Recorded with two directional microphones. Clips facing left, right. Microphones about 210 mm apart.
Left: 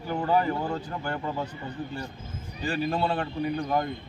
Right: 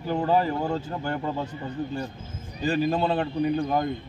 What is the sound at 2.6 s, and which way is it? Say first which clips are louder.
Speech: right 4 dB; 20° right (ahead or behind).